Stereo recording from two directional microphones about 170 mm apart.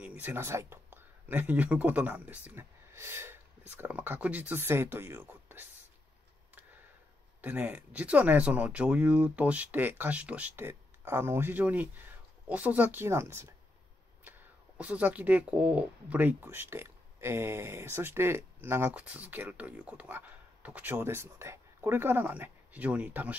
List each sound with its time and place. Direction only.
0.0 s speech: 10° right (ahead or behind)
7.4 s speech: 10° right (ahead or behind)
14.8 s speech: 10° right (ahead or behind)